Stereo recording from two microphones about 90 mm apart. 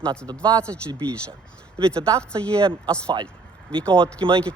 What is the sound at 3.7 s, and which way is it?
Speech, 15° left (ahead or behind).